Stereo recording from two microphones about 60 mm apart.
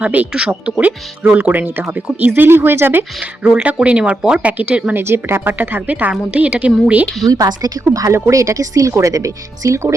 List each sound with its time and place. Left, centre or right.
0.0 s a woman's voice: right
3.4 s a woman's voice: centre
4.9 s a woman's voice: right; by 7.0 s centre
7.3 s a woman's voice: right
8.1 s speech: right